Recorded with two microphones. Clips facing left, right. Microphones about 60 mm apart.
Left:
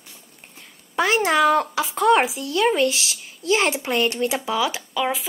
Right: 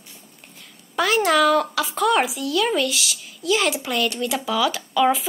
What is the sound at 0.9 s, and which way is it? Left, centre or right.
Speech, left.